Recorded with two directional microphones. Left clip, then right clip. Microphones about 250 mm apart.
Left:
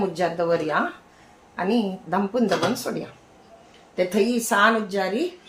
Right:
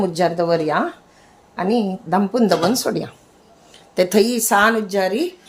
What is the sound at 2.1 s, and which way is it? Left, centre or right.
A woman's voice, right.